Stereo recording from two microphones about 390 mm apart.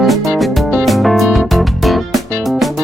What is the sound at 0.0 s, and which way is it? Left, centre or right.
Music, centre.